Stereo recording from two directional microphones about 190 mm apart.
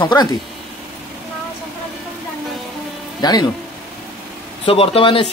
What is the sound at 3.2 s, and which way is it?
Speech, 20° left (ahead or behind).